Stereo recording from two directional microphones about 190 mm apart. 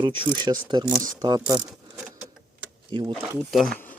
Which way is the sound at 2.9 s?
25° right (ahead or behind).